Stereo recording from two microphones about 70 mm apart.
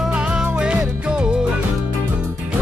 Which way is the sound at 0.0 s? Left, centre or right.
Centre.